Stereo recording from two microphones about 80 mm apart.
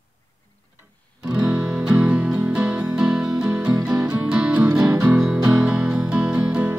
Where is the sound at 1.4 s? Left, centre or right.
Right.